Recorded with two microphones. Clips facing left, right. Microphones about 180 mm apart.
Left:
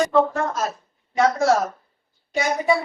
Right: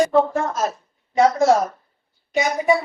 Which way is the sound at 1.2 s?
30° right (ahead or behind).